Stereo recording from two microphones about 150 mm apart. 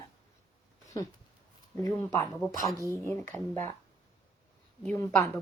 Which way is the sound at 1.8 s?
20° left (ahead or behind).